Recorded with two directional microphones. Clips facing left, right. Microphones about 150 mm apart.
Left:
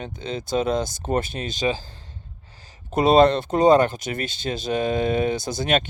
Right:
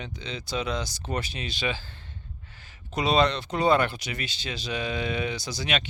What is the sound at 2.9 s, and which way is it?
Speech, 50° left (ahead or behind).